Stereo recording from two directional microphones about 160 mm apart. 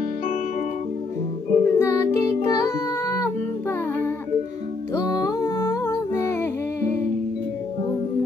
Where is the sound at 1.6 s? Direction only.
15° left (ahead or behind).